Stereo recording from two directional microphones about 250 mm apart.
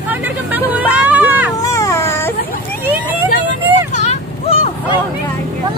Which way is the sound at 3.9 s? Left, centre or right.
Left.